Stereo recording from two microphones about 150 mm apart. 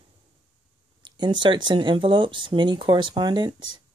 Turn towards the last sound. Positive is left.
turn(degrees=-30)  # may be behind; listen again after turning